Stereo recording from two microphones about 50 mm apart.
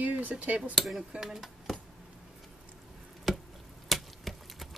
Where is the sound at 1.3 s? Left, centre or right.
Centre.